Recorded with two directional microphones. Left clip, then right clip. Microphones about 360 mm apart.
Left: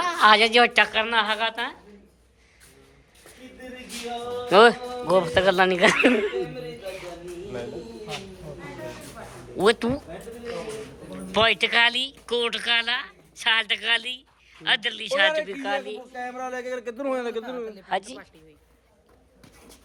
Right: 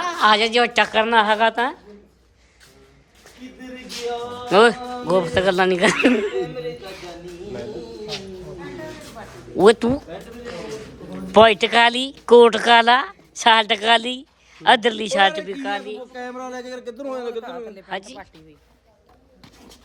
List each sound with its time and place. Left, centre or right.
0.0 s a woman's voice: centre
4.4 s a man's voice: centre
9.6 s a woman's voice: centre
11.1 s speech: centre
16.2 s speech: centre
17.8 s speech: centre